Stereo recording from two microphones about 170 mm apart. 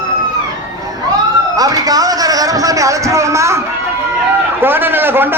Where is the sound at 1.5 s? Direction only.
20° right (ahead or behind).